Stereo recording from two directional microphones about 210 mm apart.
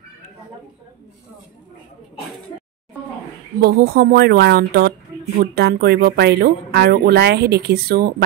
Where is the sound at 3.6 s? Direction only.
45° right (ahead or behind).